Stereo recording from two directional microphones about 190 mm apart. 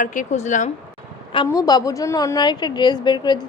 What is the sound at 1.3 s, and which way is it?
A woman's voice, 20° left (ahead or behind).